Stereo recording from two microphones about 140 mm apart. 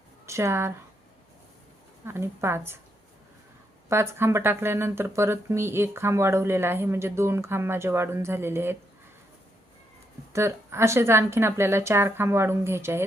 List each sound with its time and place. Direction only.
0.3 s speech: 20° right (ahead or behind)
2.0 s speech: 15° right (ahead or behind)
3.8 s speech: 20° right (ahead or behind)
10.3 s speech: 20° right (ahead or behind)